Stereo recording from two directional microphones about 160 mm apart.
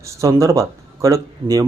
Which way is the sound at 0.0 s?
20° right (ahead or behind).